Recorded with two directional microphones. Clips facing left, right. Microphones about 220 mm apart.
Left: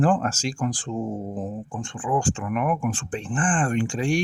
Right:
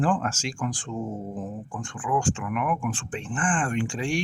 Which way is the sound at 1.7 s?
25° left (ahead or behind).